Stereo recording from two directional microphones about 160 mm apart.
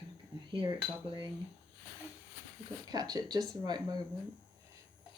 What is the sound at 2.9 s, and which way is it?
Speech, 25° right (ahead or behind).